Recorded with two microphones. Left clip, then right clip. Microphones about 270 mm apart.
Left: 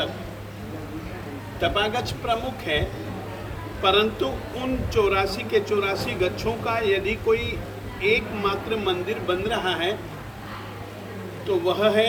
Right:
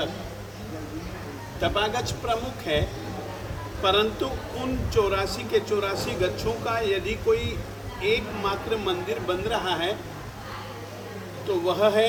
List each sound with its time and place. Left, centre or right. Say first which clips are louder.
1.6 s a man's voice: left 2 dB; centre
3.8 s a man's voice: left 2 dB; centre
11.4 s a man's voice: left 1 dB; centre